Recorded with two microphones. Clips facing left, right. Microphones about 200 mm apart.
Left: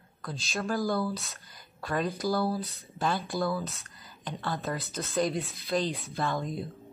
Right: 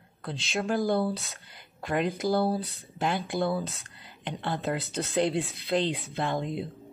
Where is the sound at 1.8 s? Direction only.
20° right (ahead or behind).